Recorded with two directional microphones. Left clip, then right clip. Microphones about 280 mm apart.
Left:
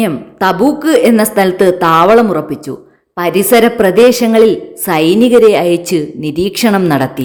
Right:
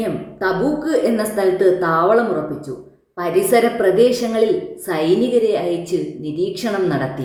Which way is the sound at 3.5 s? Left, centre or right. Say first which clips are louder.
Left 7 dB; left.